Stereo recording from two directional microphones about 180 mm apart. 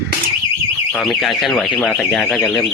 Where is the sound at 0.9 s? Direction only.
Centre (ahead or behind).